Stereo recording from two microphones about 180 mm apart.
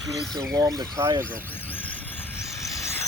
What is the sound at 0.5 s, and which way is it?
Speech, 20° right (ahead or behind).